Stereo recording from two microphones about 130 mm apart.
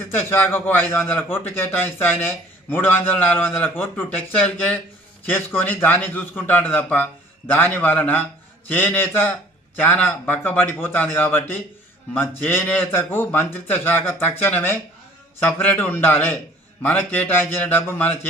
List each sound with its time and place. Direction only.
0.2 s a man's voice: 15° left (ahead or behind)